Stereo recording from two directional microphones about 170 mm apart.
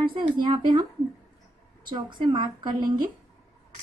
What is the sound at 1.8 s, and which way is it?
Speech, 30° right (ahead or behind).